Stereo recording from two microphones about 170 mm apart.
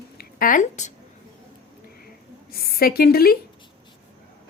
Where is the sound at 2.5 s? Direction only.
65° left (ahead or behind).